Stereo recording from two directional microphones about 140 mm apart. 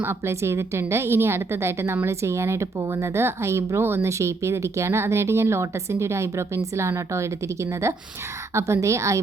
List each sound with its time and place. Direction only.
0.0 s a woman's voice: 15° right (ahead or behind)